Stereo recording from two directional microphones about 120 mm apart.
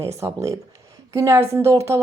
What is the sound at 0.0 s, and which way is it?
Speech, 25° right (ahead or behind).